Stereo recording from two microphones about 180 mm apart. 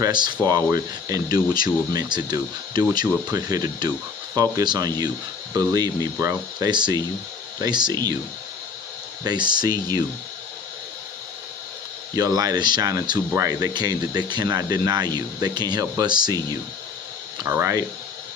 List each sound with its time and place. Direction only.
0.0 s speech: 25° right (ahead or behind)
9.2 s speech: 25° right (ahead or behind)
12.1 s speech: 20° right (ahead or behind)